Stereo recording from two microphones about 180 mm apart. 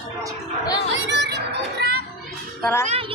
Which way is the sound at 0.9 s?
80° right.